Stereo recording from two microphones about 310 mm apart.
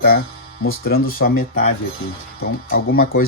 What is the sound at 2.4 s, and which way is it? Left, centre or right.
Speech, left.